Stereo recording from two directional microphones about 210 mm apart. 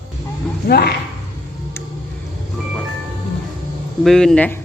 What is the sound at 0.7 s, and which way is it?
Speech, 50° left (ahead or behind).